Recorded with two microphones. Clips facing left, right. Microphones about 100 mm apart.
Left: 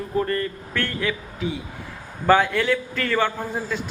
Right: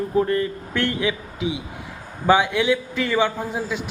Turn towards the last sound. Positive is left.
turn(degrees=-10)  # may be behind; listen again after turning